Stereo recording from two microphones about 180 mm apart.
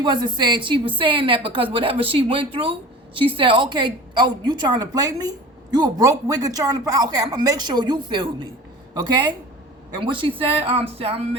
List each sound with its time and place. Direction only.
0.0 s a woman's voice: 25° right (ahead or behind)